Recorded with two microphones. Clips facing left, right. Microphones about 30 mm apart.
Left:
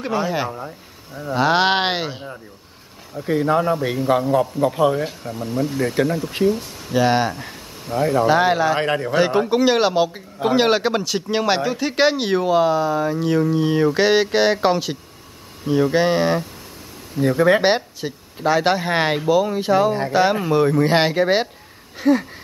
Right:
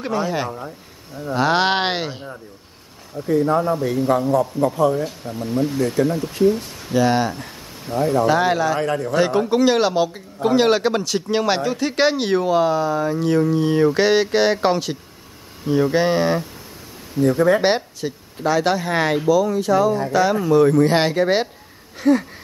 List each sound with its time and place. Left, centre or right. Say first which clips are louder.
0.0 s a man's voice: even; centre
3.3 s a man's voice: even; left
5.5 s speech: right 1 dB; centre
6.9 s a man's voice: even; centre
8.7 s a man's voice: left 1 dB; left
9.1 s a man's voice: even; centre
20.6 s a man's voice: right 1 dB; centre
21.9 s a sound: even; centre